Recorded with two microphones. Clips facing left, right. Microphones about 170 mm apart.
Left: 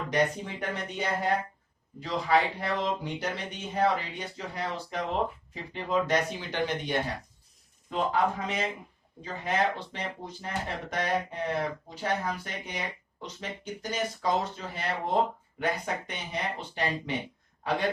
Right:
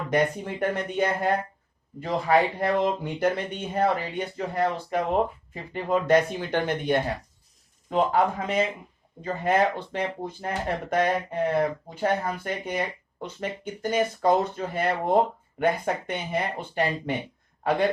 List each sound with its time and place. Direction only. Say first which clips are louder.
0.1 s speech: right 4 dB; 55° right (ahead or behind)